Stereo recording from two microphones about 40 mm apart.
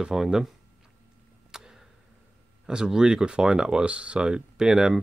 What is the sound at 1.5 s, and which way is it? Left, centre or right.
Tick-tock, centre.